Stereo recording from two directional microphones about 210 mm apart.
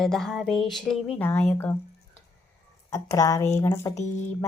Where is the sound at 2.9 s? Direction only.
15° left (ahead or behind).